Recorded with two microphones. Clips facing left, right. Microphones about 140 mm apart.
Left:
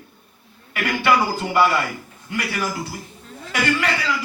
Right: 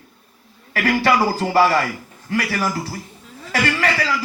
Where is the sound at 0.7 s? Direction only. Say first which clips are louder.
Right 2 dB; 35° right (ahead or behind).